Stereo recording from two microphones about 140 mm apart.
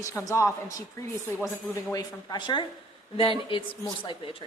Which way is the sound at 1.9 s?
25° left (ahead or behind).